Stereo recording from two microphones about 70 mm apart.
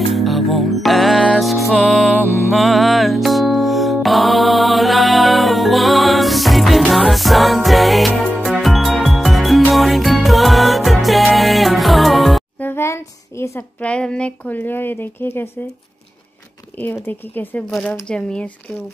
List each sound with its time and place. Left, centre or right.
0.1 s music: centre
12.5 s a sound: left
13.7 s speech: centre; by 15.4 s left
16.8 s speech: left
17.6 s speech: centre